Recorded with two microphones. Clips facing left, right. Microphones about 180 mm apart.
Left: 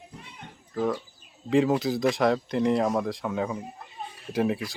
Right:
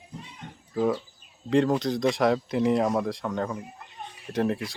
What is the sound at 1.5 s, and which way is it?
Speech, 5° left (ahead or behind).